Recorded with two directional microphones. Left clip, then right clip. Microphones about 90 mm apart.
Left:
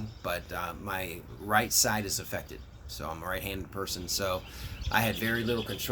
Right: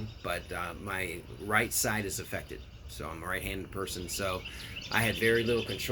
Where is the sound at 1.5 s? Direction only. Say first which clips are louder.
Left 3 dB; 35° left (ahead or behind).